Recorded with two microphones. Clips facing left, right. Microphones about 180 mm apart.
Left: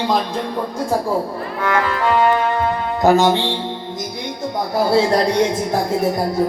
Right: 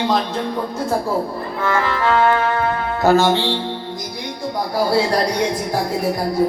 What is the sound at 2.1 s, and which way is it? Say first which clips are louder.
Speech: even; 15° left (ahead or behind).